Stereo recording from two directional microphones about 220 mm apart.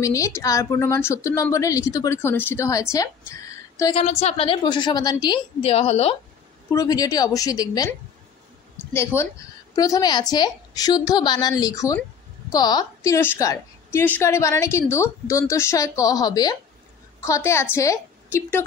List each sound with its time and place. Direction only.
0.0 s a woman's voice: 15° left (ahead or behind)
3.9 s a woman's voice: 30° left (ahead or behind)
6.7 s a woman's voice: 15° left (ahead or behind)
8.9 s a woman's voice: 10° left (ahead or behind)